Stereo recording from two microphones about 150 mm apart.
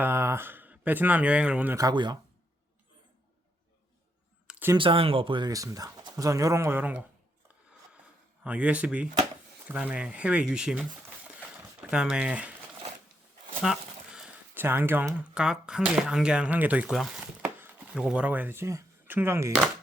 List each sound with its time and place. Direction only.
0.0 s speech: 15° right (ahead or behind)
1.7 s speech: 25° right (ahead or behind)
4.4 s a sound: 10° right (ahead or behind)
4.8 s speech: 35° right (ahead or behind); by 7.0 s 10° right (ahead or behind)
8.4 s speech: 10° right (ahead or behind)
11.5 s a sound: 10° right (ahead or behind)
13.6 s speech: 5° right (ahead or behind)
17.4 s chopping: 15° right (ahead or behind)